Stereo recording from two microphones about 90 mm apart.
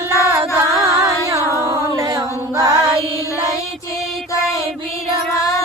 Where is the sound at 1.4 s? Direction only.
35° left (ahead or behind).